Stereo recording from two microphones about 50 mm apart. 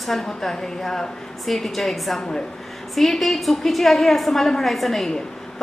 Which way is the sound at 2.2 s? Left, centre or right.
Centre.